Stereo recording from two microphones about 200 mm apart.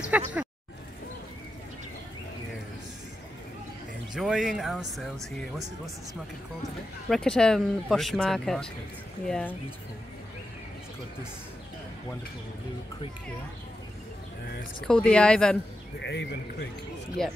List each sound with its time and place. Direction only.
0.1 s speech: 10° right (ahead or behind)
4.1 s speech: 5° right (ahead or behind)
7.1 s speech: 5° left (ahead or behind)
14.4 s speech: 50° left (ahead or behind)
14.8 s speech: 5° left (ahead or behind)
16.0 s a man's voice: 60° left (ahead or behind)
17.2 s speech: centre (ahead or behind)